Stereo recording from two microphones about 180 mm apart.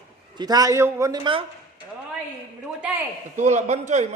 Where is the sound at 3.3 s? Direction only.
40° right (ahead or behind).